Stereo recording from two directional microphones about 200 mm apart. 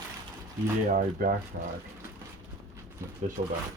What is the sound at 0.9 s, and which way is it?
Speech, 40° right (ahead or behind).